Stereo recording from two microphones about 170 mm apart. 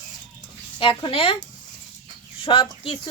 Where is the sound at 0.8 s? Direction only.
30° left (ahead or behind).